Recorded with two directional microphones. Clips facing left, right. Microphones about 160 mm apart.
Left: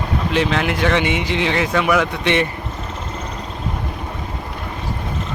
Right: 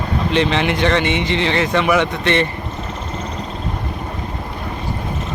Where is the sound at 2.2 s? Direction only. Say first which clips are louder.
Right 1 dB; 15° left (ahead or behind).